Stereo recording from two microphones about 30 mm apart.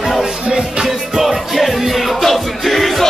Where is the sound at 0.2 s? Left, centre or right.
Right.